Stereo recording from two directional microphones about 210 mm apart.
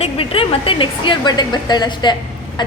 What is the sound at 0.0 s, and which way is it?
A woman's voice, 25° left (ahead or behind).